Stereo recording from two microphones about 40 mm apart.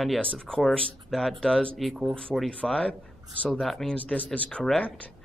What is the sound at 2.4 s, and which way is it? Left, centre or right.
Speech, left.